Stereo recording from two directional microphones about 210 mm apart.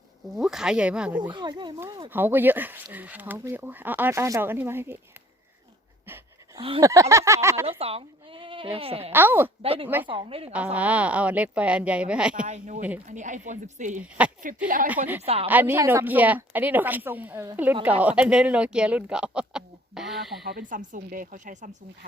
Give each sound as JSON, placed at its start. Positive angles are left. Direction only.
{"t": 0.3, "sound": "speech", "side_deg": 0}
{"t": 1.3, "sound": "speech", "side_deg": -20}
{"t": 2.1, "sound": "speech", "side_deg": -10}
{"t": 6.6, "sound": "speech", "side_deg": -25}
{"t": 6.8, "sound": "speech", "side_deg": -15}
{"t": 7.7, "sound": "speech", "side_deg": -25}
{"t": 9.1, "sound": "speech", "side_deg": -10}
{"t": 9.6, "sound": "speech", "side_deg": -25}
{"t": 10.5, "sound": "speech", "side_deg": -5}
{"t": 12.5, "sound": "a woman's voice", "side_deg": -35}
{"t": 15.0, "sound": "speech", "side_deg": -10}
{"t": 20.5, "sound": "a woman's voice", "side_deg": -40}